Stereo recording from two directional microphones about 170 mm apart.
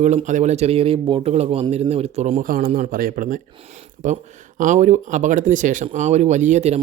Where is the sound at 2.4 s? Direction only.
55° right (ahead or behind).